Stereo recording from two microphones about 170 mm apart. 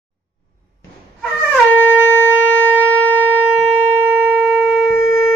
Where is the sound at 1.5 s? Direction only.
10° right (ahead or behind).